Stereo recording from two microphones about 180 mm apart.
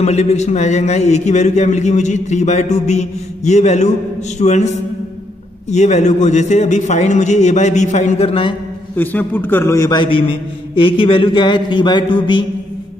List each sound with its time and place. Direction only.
0.0 s a man's voice: 35° left (ahead or behind)
5.7 s a man's voice: 40° left (ahead or behind)
8.9 s a man's voice: 10° left (ahead or behind); by 12.4 s 25° left (ahead or behind)